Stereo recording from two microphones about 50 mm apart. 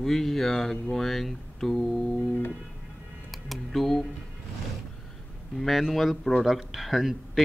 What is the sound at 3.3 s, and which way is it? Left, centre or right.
Speech, centre.